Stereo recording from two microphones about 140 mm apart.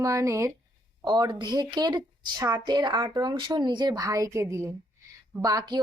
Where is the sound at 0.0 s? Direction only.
20° right (ahead or behind).